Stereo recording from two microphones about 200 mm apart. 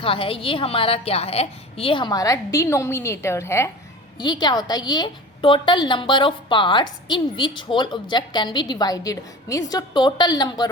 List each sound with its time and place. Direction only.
0.0 s a woman's voice: 25° left (ahead or behind)